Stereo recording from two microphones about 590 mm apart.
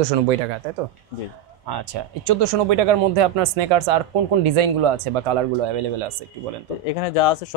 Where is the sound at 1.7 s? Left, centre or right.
Right.